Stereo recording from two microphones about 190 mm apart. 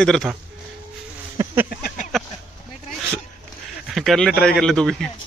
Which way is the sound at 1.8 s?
45° left (ahead or behind).